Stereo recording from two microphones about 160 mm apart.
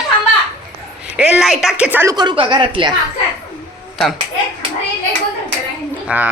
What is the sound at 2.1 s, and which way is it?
Speech, 30° right (ahead or behind).